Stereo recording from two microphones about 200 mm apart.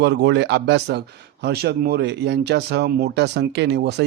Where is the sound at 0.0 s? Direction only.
60° right (ahead or behind).